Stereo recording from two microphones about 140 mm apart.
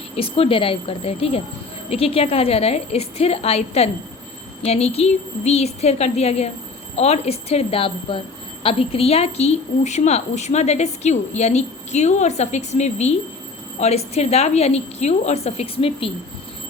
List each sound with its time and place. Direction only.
0.2 s a woman's voice: 40° left (ahead or behind)